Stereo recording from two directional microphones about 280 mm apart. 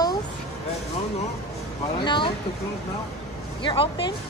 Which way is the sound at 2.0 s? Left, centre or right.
Centre.